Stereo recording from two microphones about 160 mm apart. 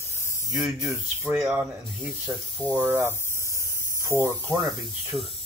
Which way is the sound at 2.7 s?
10° right (ahead or behind).